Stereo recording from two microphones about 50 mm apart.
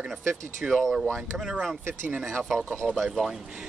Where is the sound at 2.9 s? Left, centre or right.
Centre.